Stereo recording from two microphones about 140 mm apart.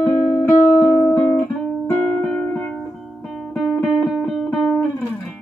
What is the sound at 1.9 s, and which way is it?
Music, 15° left (ahead or behind).